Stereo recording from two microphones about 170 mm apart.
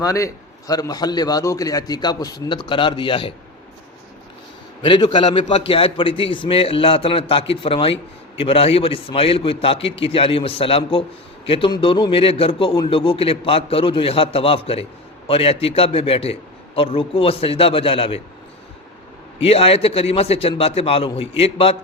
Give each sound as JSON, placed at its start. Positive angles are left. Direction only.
{"t": 0.0, "sound": "a man's voice", "side_deg": 20}
{"t": 4.8, "sound": "a man's voice", "side_deg": 30}
{"t": 19.4, "sound": "a man's voice", "side_deg": 35}